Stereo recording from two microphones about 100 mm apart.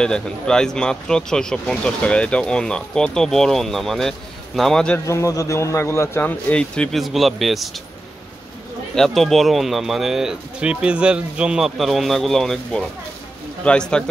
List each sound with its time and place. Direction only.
0.0 s speech: 5° left (ahead or behind)
5.0 s speech: 30° left (ahead or behind)
6.5 s speech: 10° left (ahead or behind)
8.9 s speech: 5° left (ahead or behind)